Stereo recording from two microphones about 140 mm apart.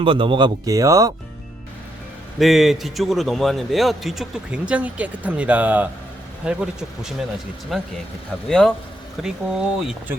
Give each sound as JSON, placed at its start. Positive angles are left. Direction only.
{"t": 0.0, "sound": "speech", "side_deg": -40}
{"t": 2.4, "sound": "a man's voice", "side_deg": 0}